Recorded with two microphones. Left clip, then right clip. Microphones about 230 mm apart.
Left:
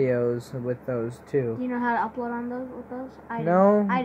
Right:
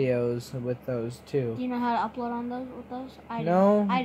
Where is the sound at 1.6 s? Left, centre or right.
Centre.